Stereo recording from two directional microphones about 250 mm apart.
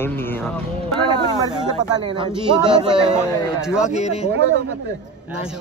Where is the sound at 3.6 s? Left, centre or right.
Centre.